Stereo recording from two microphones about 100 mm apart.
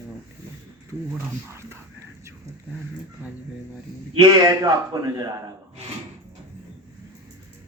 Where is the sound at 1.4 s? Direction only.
25° right (ahead or behind).